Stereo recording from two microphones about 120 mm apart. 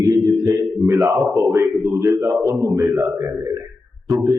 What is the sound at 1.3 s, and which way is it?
A man's voice, 25° right (ahead or behind).